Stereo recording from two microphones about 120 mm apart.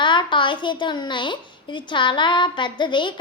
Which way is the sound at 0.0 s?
40° left (ahead or behind).